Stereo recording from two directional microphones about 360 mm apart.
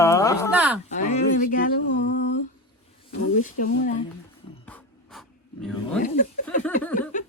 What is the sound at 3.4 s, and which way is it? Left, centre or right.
Speech, left.